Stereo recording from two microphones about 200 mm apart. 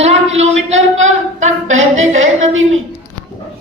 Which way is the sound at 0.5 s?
75° right (ahead or behind).